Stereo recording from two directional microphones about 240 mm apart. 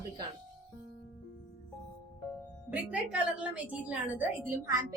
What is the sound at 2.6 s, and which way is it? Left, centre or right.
Speech, centre.